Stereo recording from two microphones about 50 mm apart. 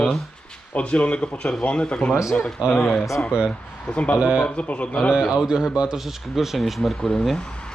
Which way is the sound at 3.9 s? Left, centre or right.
Left.